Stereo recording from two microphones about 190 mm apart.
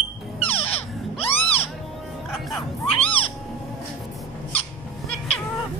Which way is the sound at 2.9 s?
30° left (ahead or behind).